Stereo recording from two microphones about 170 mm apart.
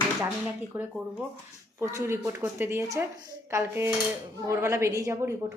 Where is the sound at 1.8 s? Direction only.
15° right (ahead or behind).